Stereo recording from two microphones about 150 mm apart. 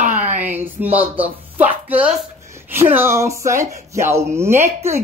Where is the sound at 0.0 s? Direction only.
55° right (ahead or behind).